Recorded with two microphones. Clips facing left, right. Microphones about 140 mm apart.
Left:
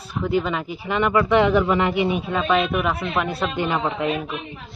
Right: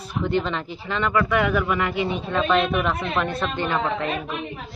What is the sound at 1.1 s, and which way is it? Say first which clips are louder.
A man's voice: left 4 dB; 25° left (ahead or behind).